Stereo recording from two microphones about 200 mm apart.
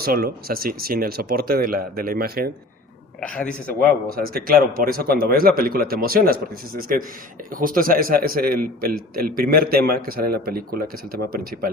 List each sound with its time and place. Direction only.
0.0 s a man's voice: 50° right (ahead or behind)
3.2 s speech: 5° left (ahead or behind)
4.1 s a man's voice: 45° right (ahead or behind)